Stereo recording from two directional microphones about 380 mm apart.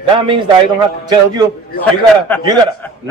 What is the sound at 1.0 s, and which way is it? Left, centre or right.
Speech, centre.